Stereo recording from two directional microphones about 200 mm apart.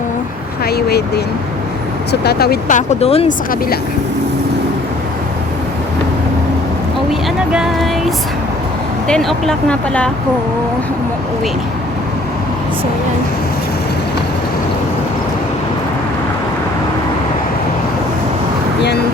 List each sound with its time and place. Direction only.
0.6 s vehicle: 55° left (ahead or behind)
2.2 s speech: 50° left (ahead or behind); by 3.3 s 30° left (ahead or behind)
7.1 s vehicle: centre (ahead or behind)
9.0 s speech: 5° left (ahead or behind)